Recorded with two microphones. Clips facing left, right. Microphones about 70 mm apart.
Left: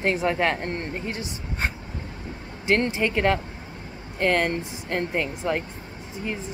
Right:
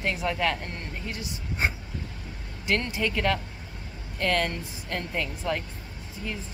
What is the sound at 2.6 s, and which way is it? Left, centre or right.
Speech, left.